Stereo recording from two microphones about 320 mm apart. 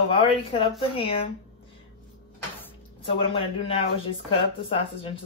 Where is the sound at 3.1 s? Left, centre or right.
Centre.